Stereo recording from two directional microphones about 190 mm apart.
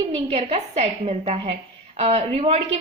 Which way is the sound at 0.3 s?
30° right (ahead or behind).